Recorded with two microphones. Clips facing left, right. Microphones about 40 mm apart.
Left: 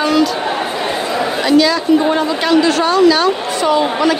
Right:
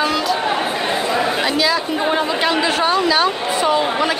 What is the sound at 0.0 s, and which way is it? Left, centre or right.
Chatter, centre.